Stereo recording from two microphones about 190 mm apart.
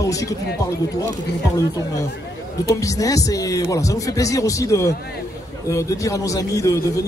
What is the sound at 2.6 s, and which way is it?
Speech, 15° left (ahead or behind).